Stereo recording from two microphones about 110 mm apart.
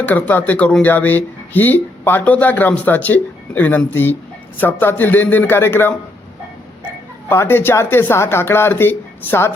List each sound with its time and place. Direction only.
0.0 s speech: 15° left (ahead or behind)
7.3 s speech: 20° left (ahead or behind)